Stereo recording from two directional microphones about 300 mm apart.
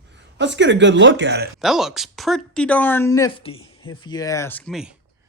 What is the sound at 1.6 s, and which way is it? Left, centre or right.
Speech, centre.